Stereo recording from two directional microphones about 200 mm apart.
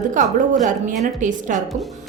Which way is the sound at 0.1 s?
40° right (ahead or behind).